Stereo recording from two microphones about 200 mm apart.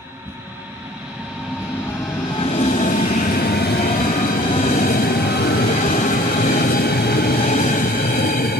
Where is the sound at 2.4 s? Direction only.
30° left (ahead or behind).